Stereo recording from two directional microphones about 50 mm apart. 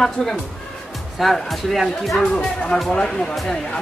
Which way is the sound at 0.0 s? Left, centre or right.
Centre.